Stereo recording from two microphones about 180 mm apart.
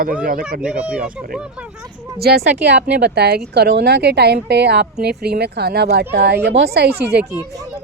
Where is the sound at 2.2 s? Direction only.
60° right (ahead or behind).